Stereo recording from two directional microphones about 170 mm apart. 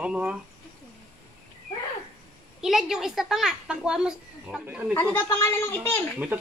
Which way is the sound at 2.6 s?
Centre (ahead or behind).